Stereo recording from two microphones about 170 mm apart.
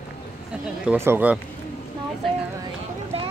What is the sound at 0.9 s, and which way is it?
Speech, 15° right (ahead or behind).